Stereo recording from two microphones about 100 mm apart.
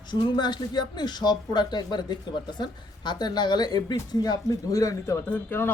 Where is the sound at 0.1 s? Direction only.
45° left (ahead or behind).